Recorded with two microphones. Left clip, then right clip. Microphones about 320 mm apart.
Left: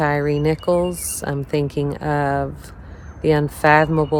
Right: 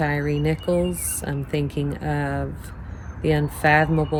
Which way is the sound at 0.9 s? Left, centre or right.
Centre.